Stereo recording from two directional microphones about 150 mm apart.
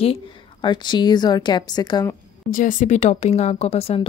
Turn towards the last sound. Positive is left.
turn(degrees=40)  # may be behind; listen again after turning